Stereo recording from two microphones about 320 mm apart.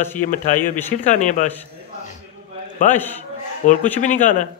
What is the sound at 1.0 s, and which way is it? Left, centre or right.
Speech, left.